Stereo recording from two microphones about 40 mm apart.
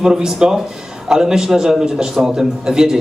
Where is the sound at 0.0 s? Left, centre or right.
Centre.